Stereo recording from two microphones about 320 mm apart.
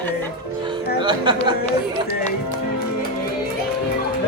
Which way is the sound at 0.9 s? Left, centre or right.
Centre.